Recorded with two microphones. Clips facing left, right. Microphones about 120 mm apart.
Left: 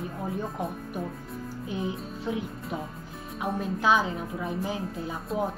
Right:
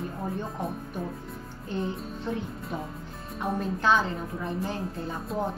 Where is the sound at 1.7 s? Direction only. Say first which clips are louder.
Right 2 dB; 5° left (ahead or behind).